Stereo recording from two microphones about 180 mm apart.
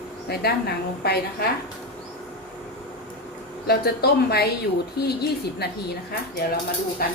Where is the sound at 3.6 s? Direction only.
60° left (ahead or behind).